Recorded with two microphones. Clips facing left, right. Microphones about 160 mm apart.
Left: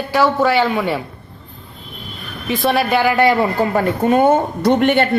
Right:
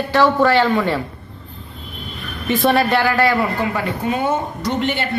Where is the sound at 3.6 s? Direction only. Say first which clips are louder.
Left 5 dB; 45° left (ahead or behind).